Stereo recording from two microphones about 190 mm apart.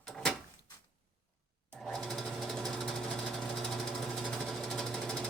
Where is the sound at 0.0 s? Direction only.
5° left (ahead or behind).